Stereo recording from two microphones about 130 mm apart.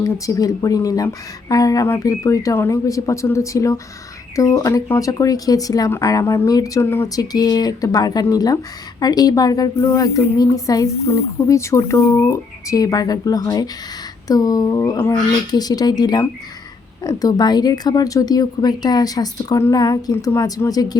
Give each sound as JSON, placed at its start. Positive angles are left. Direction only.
{"t": 0.0, "sound": "speech", "side_deg": 25}